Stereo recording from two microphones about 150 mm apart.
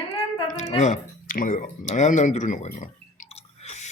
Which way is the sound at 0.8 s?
60° left (ahead or behind).